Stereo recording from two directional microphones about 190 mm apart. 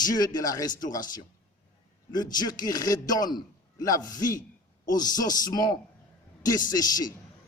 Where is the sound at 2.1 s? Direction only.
20° left (ahead or behind).